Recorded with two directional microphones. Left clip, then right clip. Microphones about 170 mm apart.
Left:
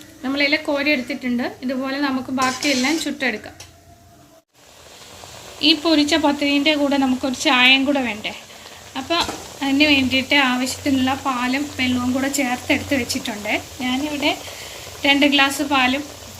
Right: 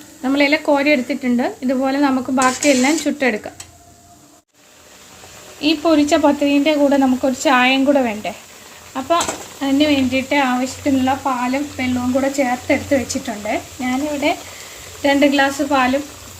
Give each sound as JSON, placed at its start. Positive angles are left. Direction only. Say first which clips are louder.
{"t": 0.2, "sound": "a woman's voice", "louder": "right 3 dB", "side_deg": -70}
{"t": 5.5, "sound": "speech", "louder": "right 1 dB", "side_deg": -40}
{"t": 15.0, "sound": "speech", "louder": "right 1 dB", "side_deg": -30}